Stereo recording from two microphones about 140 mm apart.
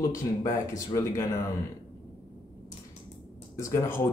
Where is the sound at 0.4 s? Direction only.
25° left (ahead or behind).